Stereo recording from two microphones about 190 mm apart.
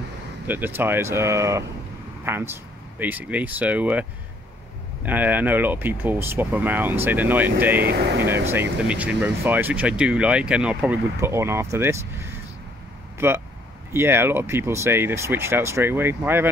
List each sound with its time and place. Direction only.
0.5 s speech: 10° right (ahead or behind)
5.0 s speech: 10° right (ahead or behind)
7.8 s speech: 60° right (ahead or behind)
8.5 s speech: 10° right (ahead or behind)
13.2 s speech: 10° right (ahead or behind)